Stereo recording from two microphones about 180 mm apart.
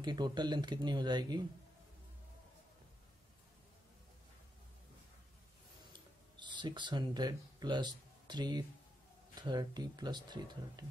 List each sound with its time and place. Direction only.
0.0 s speech: 25° right (ahead or behind)
5.9 s a sound: 25° right (ahead or behind)
9.3 s speech: 25° right (ahead or behind)